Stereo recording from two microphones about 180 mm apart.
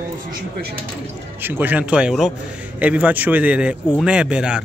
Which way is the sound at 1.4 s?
10° right (ahead or behind).